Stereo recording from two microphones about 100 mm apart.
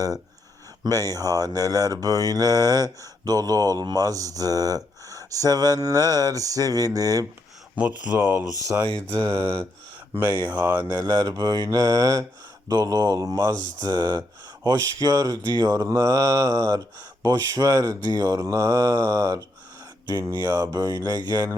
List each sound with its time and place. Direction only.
0.9 s speech: 35° right (ahead or behind)
7.8 s speech: 15° right (ahead or behind)
8.6 s speech: 30° right (ahead or behind)
9.0 s mantra: 45° right (ahead or behind)
9.3 s speech: 30° right (ahead or behind)
10.6 s speech: 15° right (ahead or behind)
10.8 s speech: 40° right (ahead or behind)